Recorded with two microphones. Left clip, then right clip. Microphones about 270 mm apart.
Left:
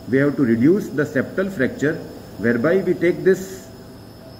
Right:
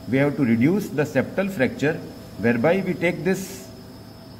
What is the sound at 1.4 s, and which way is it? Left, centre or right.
A man's voice, right.